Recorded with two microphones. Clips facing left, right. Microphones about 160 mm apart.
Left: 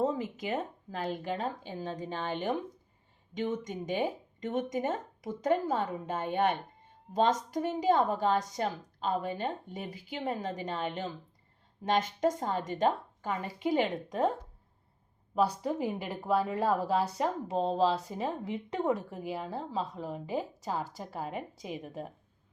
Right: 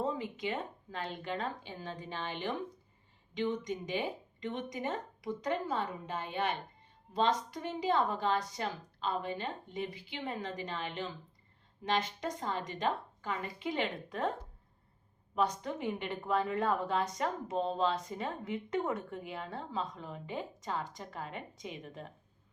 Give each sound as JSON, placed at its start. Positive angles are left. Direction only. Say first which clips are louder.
{"t": 0.0, "sound": "a woman's voice", "louder": "left 4 dB", "side_deg": 40}
{"t": 15.6, "sound": "speech", "louder": "left 4 dB", "side_deg": 35}
{"t": 16.3, "sound": "speech", "louder": "left 3 dB", "side_deg": 5}
{"t": 16.6, "sound": "speech", "louder": "left 3 dB", "side_deg": 35}
{"t": 18.1, "sound": "speech", "louder": "left 3 dB", "side_deg": 5}